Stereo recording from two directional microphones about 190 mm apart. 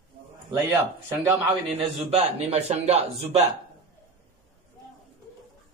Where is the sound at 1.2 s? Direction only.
15° right (ahead or behind).